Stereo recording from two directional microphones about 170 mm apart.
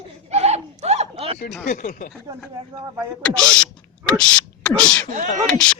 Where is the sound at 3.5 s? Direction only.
5° left (ahead or behind).